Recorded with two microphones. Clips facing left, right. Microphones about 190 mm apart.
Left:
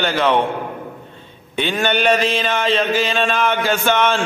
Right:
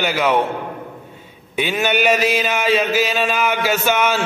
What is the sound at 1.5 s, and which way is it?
A man's voice, 10° right (ahead or behind).